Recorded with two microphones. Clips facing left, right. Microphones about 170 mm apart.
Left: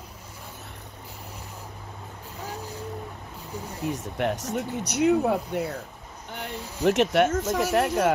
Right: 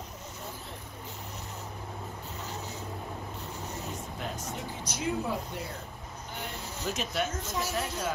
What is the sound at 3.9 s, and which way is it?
Speech, 75° left (ahead or behind).